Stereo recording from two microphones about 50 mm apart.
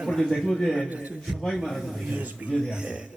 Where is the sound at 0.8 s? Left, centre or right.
Right.